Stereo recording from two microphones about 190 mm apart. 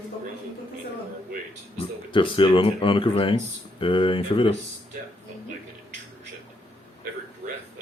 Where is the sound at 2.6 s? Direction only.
25° left (ahead or behind).